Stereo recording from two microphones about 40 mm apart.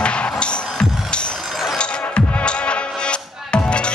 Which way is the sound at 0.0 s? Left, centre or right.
Left.